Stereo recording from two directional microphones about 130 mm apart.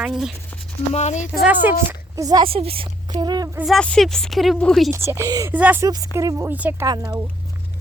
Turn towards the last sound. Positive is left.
turn(degrees=-30)  # may be behind; listen again after turning